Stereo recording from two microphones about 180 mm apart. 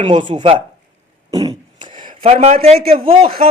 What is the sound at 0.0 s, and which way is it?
Speech, 25° right (ahead or behind).